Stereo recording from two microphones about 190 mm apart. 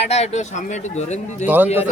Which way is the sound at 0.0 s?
35° left (ahead or behind).